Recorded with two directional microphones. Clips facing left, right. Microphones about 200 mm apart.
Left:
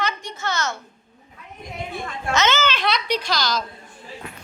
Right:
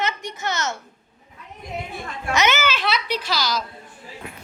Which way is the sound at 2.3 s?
15° right (ahead or behind).